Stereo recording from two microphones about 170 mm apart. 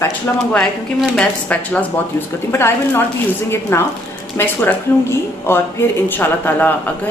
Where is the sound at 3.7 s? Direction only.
15° left (ahead or behind).